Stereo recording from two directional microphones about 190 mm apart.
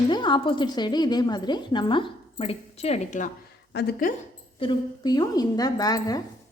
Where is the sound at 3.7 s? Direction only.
50° left (ahead or behind).